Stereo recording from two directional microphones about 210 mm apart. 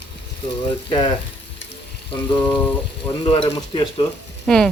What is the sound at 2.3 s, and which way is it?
Speech, 20° left (ahead or behind).